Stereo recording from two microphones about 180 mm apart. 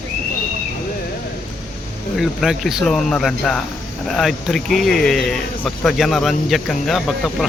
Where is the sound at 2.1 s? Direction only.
Centre (ahead or behind).